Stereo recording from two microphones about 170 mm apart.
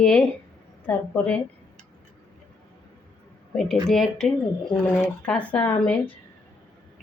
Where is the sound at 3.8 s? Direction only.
Centre (ahead or behind).